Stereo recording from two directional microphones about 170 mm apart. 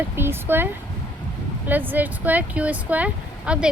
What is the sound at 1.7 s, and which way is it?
Speech, 10° right (ahead or behind).